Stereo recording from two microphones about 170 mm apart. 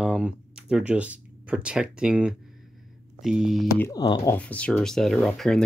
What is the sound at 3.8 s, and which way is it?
Speech, 20° left (ahead or behind).